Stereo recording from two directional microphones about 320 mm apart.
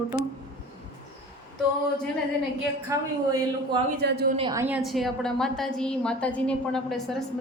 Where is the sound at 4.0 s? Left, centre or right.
Right.